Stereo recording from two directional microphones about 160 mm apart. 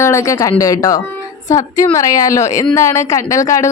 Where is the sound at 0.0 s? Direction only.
20° left (ahead or behind).